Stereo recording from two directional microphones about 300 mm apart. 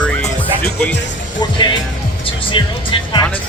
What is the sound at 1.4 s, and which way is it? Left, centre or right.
Speech, centre.